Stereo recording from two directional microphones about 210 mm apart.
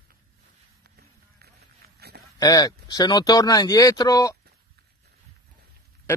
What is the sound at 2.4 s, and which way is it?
Speech, 15° left (ahead or behind).